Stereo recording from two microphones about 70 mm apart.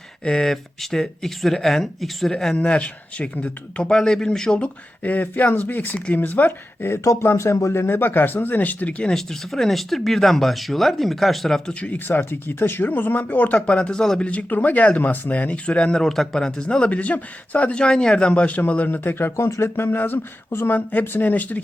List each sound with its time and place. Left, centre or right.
0.3 s speech: centre
5.0 s speech: left
7.0 s speech: left; by 9.1 s centre
9.1 s speech: centre
11.7 s speech: centre
11.9 s speech: left
13.6 s speech: centre